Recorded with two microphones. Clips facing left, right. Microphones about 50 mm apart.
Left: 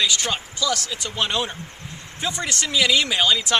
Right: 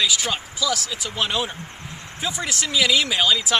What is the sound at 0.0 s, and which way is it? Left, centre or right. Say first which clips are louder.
Speech: even; centre.